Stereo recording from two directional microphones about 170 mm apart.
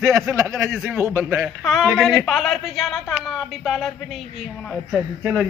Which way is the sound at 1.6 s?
Centre (ahead or behind).